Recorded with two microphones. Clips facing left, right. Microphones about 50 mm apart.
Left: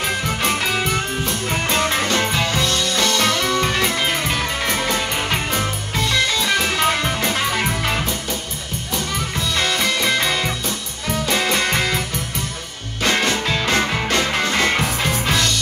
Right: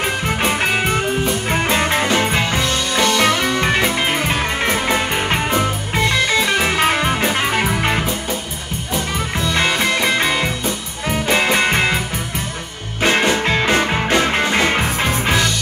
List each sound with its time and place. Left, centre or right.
0.0 s music: right
0.9 s music: centre
8.9 s music: right
13.0 s music: right